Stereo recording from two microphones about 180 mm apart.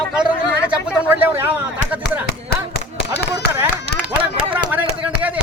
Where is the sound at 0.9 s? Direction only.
10° right (ahead or behind).